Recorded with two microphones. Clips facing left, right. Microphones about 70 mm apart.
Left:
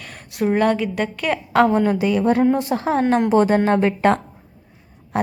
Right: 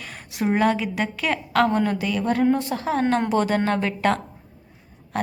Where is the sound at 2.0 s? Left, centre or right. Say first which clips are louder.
Left 5 dB; left.